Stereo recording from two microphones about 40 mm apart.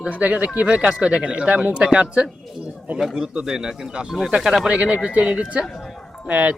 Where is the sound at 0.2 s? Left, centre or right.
Right; by 3.7 s centre.